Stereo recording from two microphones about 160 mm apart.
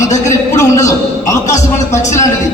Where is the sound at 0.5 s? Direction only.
20° left (ahead or behind).